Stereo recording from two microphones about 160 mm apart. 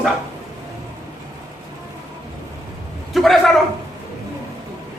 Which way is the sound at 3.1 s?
Centre (ahead or behind).